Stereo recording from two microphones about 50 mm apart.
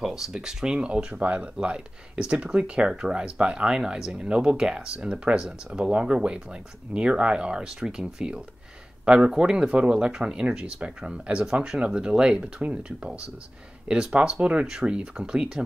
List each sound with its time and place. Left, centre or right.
0.0 s speech: centre